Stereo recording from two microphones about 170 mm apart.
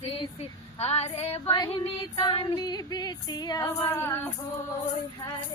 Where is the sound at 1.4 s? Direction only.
20° left (ahead or behind).